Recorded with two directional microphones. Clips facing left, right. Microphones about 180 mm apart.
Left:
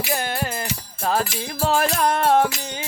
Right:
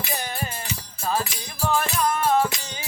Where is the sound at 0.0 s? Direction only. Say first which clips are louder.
Left 5 dB; 75° left (ahead or behind).